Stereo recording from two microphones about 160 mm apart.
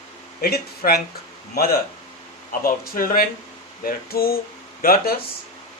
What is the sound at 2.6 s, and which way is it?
Speech, 65° left (ahead or behind).